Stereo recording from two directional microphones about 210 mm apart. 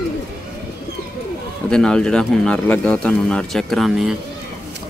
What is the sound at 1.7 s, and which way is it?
Speech, 5° left (ahead or behind).